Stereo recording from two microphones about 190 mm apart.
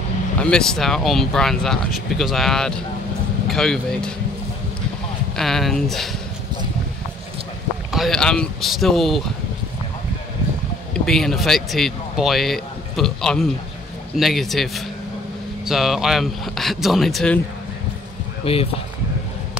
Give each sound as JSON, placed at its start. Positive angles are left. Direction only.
{"t": 0.4, "sound": "speech", "side_deg": 5}
{"t": 5.3, "sound": "speech", "side_deg": 0}
{"t": 7.9, "sound": "speech", "side_deg": 0}
{"t": 11.1, "sound": "speech", "side_deg": 0}
{"t": 18.4, "sound": "speech", "side_deg": 30}